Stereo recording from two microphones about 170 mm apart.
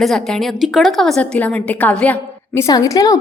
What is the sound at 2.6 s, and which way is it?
Speech, 20° left (ahead or behind).